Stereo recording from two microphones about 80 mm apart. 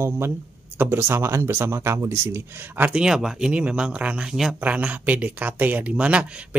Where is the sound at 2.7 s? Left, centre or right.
Right.